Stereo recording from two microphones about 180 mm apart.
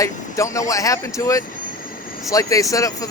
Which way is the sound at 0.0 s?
15° left (ahead or behind).